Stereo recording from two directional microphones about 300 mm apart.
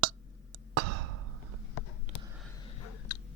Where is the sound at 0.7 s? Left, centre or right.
Right.